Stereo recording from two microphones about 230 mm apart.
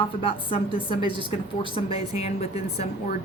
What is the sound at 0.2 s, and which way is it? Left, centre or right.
Speech, left.